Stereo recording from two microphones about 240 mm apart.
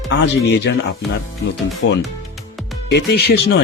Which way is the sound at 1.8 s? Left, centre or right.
Left.